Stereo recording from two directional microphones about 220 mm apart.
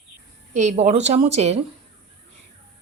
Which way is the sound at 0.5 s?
30° right (ahead or behind).